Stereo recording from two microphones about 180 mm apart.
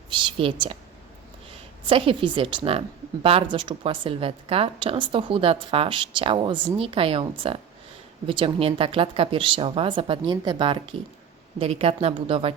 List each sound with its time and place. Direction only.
0.1 s a woman's voice: 25° right (ahead or behind)
1.9 s a woman's voice: 30° right (ahead or behind)